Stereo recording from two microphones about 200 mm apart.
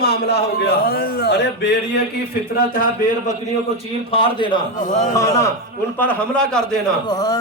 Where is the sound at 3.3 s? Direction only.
30° left (ahead or behind); by 6.8 s 5° left (ahead or behind).